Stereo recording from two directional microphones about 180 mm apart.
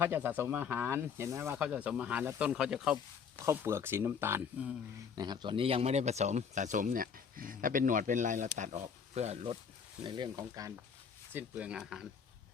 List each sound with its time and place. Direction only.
0.0 s speech: 10° right (ahead or behind)
5.1 s speech: 25° right (ahead or behind)
11.3 s speech: 10° right (ahead or behind)